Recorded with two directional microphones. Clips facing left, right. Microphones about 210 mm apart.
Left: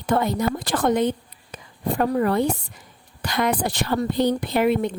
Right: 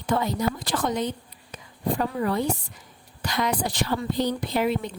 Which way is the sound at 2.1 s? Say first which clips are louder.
Left 5 dB; 55° left (ahead or behind).